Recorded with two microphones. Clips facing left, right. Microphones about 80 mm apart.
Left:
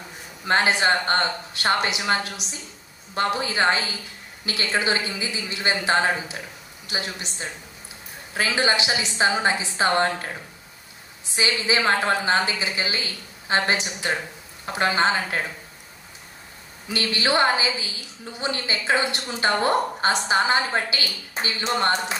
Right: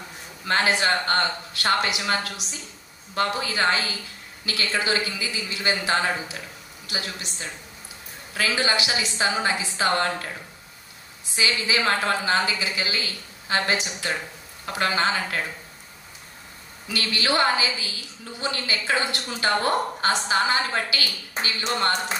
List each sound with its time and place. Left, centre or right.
0.5 s a woman's voice: left
11.3 s a woman's voice: left
16.8 s a woman's voice: left